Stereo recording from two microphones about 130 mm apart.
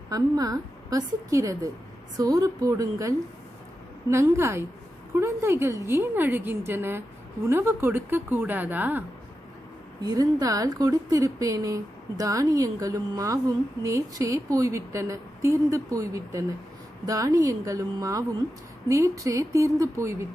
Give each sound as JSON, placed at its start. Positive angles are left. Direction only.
{"t": 0.1, "sound": "a woman's voice", "side_deg": -30}
{"t": 10.0, "sound": "a woman's voice", "side_deg": -30}